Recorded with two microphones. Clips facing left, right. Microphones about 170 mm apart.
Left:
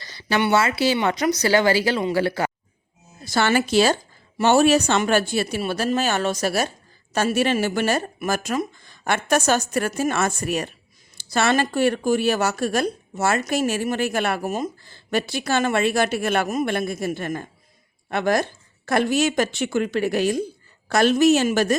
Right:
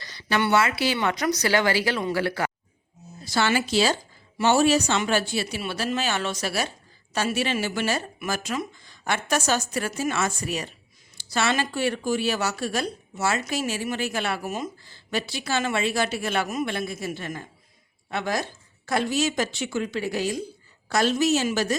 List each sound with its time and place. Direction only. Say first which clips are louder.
0.0 s a woman's voice: left 3 dB; 30° left (ahead or behind)
3.2 s a woman's voice: left 3 dB; 50° left (ahead or behind)